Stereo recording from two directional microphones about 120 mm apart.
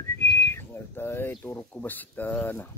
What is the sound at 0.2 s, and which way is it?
Whistling, 20° left (ahead or behind).